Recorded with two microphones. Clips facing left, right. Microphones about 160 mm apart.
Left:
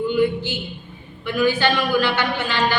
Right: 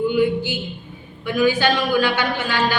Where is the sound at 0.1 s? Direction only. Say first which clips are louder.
Right 1 dB; 15° right (ahead or behind).